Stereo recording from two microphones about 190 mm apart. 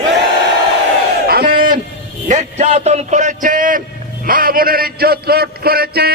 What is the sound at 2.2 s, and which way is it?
A man's voice, 40° right (ahead or behind).